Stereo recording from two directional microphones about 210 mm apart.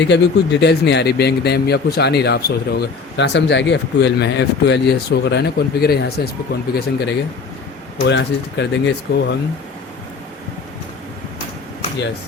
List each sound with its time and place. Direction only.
0.1 s speech: 55° left (ahead or behind)